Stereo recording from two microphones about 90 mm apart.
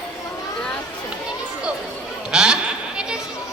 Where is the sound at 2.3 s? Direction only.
5° right (ahead or behind).